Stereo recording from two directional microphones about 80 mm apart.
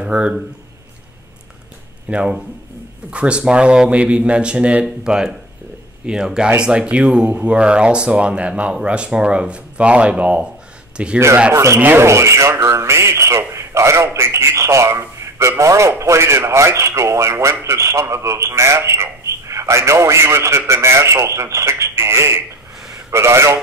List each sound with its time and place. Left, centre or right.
0.0 s speech: centre
2.0 s speech: centre
11.5 s a man's voice: right